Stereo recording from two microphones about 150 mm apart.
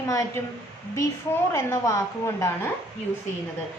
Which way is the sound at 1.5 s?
20° left (ahead or behind).